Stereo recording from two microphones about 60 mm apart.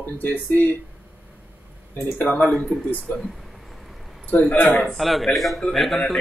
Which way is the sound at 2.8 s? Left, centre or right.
Left.